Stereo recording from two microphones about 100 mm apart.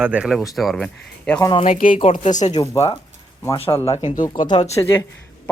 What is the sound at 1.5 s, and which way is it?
Speech, 65° left (ahead or behind).